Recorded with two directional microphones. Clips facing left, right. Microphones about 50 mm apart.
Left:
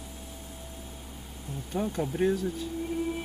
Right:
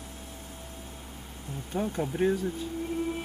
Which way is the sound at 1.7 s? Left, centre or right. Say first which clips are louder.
Even; centre.